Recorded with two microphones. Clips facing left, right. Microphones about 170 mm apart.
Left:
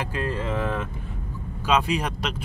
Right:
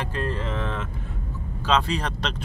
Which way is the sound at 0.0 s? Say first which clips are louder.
Left 1 dB; 10° left (ahead or behind).